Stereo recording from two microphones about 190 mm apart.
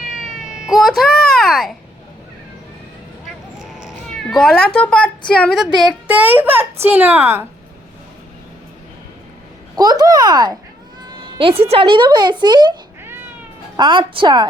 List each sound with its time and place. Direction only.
0.1 s cat: centre (ahead or behind)
3.6 s cat: 5° right (ahead or behind)
5.3 s a woman's voice: centre (ahead or behind)
9.7 s a child's voice: 20° right (ahead or behind)
13.7 s a child's voice: 25° right (ahead or behind)